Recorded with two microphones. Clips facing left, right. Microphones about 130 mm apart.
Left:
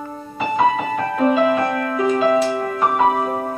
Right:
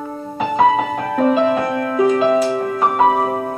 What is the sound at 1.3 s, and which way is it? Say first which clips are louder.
Music: right 1 dB; 25° right (ahead or behind).